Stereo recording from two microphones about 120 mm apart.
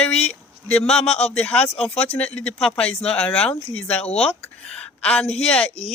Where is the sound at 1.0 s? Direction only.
60° left (ahead or behind).